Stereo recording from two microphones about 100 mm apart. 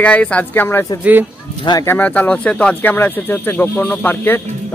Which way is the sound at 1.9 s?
15° left (ahead or behind).